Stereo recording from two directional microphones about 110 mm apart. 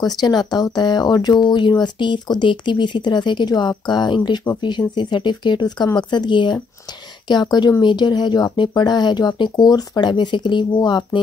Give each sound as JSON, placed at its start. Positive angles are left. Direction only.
{"t": 0.0, "sound": "speech", "side_deg": 40}